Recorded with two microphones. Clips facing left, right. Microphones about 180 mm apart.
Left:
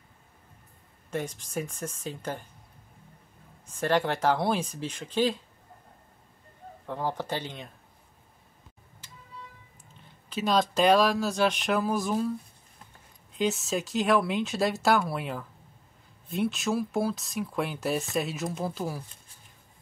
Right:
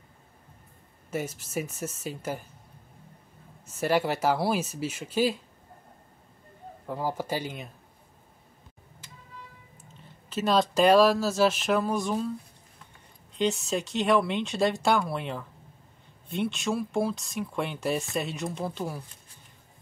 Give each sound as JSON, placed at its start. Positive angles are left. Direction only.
{"t": 1.1, "sound": "speech", "side_deg": -5}
{"t": 3.6, "sound": "speech", "side_deg": -5}
{"t": 6.9, "sound": "speech", "side_deg": -5}
{"t": 10.3, "sound": "speech", "side_deg": 0}
{"t": 13.3, "sound": "speech", "side_deg": 0}